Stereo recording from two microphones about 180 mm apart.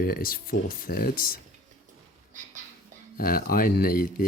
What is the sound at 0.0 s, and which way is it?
Speech, 55° left (ahead or behind).